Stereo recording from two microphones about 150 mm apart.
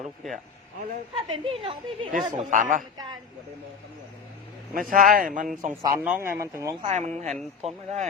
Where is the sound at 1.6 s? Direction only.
35° right (ahead or behind).